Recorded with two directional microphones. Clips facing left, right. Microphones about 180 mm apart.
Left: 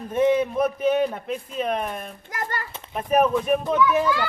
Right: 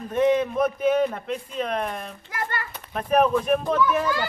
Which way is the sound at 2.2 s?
45° left (ahead or behind).